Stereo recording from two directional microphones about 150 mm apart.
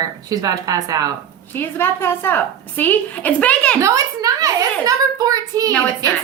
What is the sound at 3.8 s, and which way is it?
A woman's voice, 20° right (ahead or behind).